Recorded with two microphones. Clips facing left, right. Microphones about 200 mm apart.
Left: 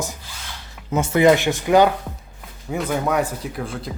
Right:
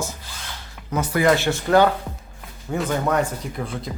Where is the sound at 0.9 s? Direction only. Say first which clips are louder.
Left 4 dB; 25° left (ahead or behind).